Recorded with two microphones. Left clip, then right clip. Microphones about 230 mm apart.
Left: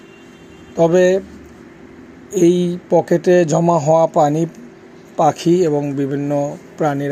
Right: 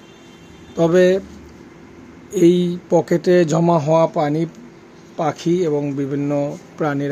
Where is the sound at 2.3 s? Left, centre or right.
Centre.